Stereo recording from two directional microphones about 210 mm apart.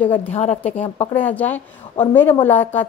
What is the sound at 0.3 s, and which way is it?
Speech, 30° left (ahead or behind).